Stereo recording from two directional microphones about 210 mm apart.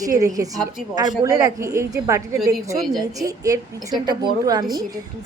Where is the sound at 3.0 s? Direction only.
15° right (ahead or behind).